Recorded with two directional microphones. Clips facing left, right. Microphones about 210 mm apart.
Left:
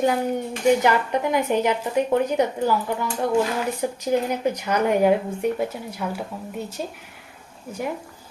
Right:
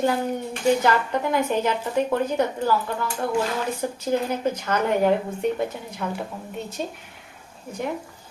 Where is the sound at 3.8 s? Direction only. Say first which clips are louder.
Left 2 dB; 15° left (ahead or behind).